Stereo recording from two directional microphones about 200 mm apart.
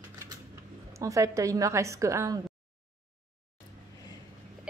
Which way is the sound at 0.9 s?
15° right (ahead or behind).